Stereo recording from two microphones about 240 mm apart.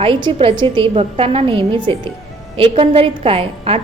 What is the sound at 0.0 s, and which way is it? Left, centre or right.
A woman's voice, right.